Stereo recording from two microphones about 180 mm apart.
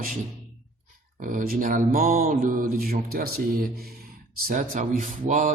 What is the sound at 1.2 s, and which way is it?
Speech, 50° right (ahead or behind).